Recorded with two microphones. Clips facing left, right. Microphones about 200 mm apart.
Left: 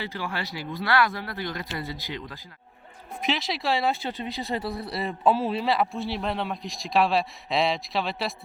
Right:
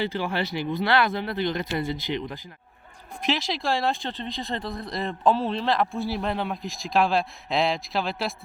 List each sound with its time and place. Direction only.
0.0 s speech: 25° right (ahead or behind)
3.2 s speech: centre (ahead or behind)